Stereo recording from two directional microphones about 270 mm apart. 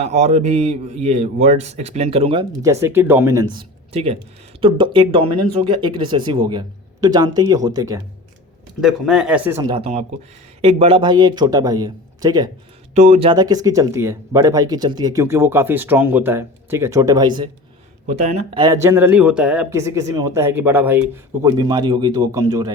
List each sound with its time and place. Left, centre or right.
0.0 s a man's voice: right
8.8 s speech: centre
9.7 s a man's voice: right
12.9 s speech: right
13.3 s speech: centre